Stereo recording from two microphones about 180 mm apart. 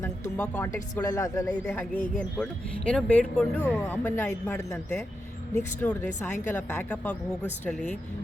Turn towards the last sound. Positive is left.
turn(degrees=10)  # may be behind; listen again after turning